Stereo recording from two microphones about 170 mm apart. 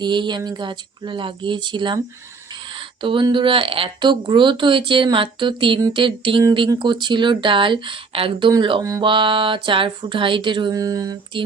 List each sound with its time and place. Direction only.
0.0 s speech: 25° right (ahead or behind)